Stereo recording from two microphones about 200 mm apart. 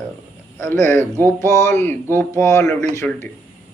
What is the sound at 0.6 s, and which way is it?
Speech, 10° left (ahead or behind).